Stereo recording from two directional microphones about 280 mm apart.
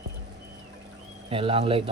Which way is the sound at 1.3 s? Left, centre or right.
Centre.